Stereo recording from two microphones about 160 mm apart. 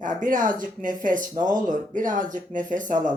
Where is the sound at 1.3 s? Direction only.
25° right (ahead or behind).